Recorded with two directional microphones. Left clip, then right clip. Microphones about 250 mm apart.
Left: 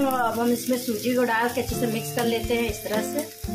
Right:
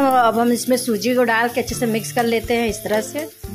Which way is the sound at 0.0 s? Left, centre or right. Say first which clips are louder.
Right 9 dB; right.